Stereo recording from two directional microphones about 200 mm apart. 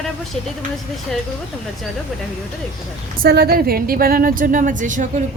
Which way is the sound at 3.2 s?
55° right (ahead or behind).